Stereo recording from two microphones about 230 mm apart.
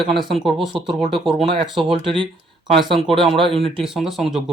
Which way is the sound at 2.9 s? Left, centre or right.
Centre.